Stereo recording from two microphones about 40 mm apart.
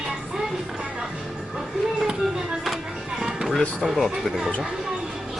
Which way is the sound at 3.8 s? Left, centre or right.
Centre.